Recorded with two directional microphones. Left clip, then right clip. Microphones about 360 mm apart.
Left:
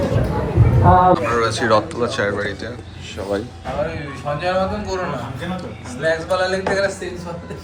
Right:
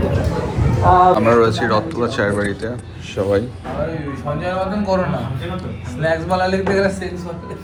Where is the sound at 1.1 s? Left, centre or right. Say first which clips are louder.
Right 5 dB; centre.